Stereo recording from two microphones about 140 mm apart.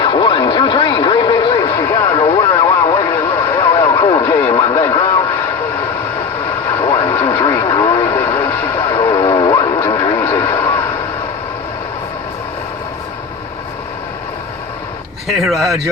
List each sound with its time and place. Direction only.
0.0 s vehicle: 35° left (ahead or behind)
3.8 s radio: 30° left (ahead or behind)
6.7 s radio: 25° left (ahead or behind)
7.3 s vehicle: 25° left (ahead or behind)
8.9 s radio: 30° left (ahead or behind)
15.4 s speech: centre (ahead or behind)